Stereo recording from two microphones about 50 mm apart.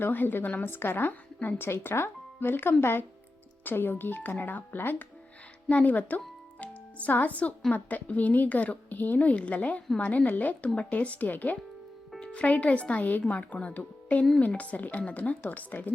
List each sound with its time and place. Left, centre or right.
0.0 s a woman's voice: left
5.6 s a woman's voice: left